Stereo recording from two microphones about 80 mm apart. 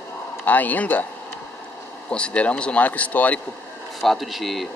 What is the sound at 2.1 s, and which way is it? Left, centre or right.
Speech, centre.